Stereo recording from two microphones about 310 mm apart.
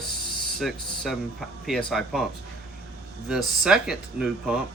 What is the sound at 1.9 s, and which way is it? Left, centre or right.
Speech, centre.